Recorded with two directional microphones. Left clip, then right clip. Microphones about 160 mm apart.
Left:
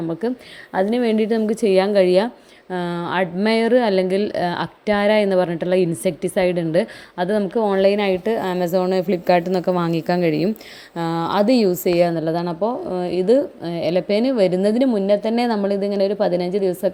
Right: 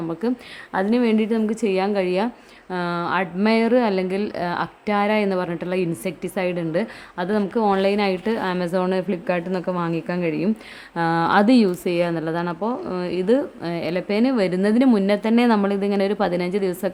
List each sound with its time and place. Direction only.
0.1 s speech: 10° left (ahead or behind)
10.9 s speech: centre (ahead or behind)
14.8 s speech: centre (ahead or behind)